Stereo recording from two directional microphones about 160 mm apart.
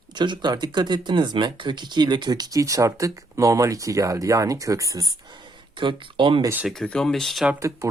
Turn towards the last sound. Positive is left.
turn(degrees=-5)  # may be behind; listen again after turning